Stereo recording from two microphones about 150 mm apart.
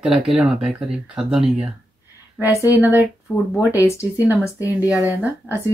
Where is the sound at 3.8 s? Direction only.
20° left (ahead or behind).